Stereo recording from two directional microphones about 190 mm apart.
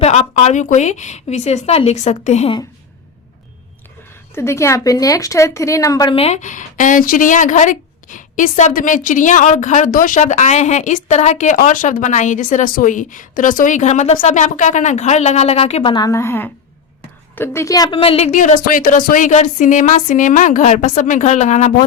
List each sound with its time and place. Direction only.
0.0 s a woman's voice: 35° left (ahead or behind)
4.4 s speech: 15° left (ahead or behind)
6.1 s a woman's voice: 35° left (ahead or behind)